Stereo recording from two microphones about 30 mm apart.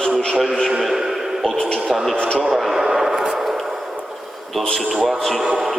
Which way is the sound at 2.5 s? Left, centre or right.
Centre.